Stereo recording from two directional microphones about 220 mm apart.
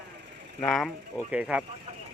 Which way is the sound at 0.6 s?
Centre (ahead or behind).